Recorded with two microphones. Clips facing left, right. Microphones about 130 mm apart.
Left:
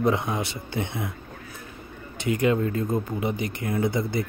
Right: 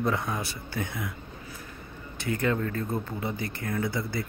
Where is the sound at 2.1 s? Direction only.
15° left (ahead or behind).